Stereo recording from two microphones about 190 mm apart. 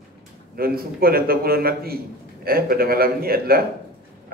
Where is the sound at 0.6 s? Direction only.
50° right (ahead or behind).